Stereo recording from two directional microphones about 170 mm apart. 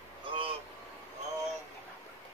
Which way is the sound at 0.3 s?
30° right (ahead or behind).